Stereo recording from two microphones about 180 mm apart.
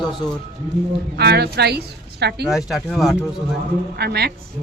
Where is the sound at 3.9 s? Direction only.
65° right (ahead or behind).